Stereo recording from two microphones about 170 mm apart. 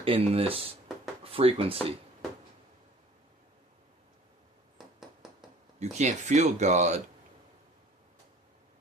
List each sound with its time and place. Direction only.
0.0 s speech: 35° right (ahead or behind)
5.8 s speech: 40° right (ahead or behind)